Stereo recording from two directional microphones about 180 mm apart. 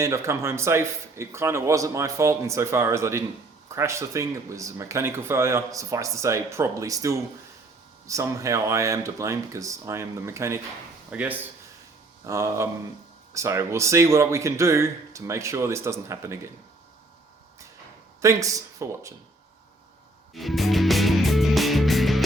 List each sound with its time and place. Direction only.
0.0 s speech: 15° right (ahead or behind)
18.2 s speech: 15° right (ahead or behind)
20.3 s music: centre (ahead or behind)